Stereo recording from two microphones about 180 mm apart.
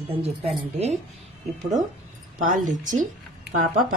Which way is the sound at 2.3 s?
45° right (ahead or behind).